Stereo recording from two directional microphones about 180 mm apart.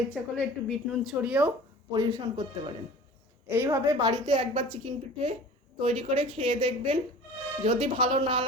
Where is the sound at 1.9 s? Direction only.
20° right (ahead or behind).